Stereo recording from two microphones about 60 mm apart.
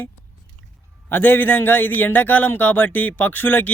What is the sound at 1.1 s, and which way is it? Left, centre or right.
A man's voice, left.